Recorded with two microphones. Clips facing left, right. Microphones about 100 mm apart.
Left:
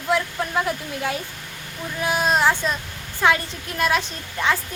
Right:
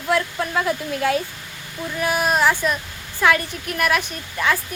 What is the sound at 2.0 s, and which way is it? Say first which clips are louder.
A woman's voice: right 1 dB; 25° left (ahead or behind).